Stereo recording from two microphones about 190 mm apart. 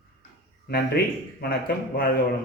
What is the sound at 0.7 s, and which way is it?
Speech, 55° left (ahead or behind).